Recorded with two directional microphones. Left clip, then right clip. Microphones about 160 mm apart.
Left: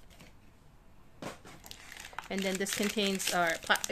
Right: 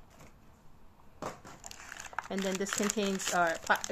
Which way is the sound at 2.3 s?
10° left (ahead or behind).